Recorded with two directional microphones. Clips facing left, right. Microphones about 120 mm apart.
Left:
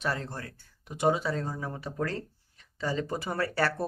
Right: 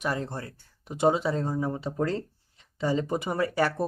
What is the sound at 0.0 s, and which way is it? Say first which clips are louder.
Speech: right 2 dB; 15° right (ahead or behind).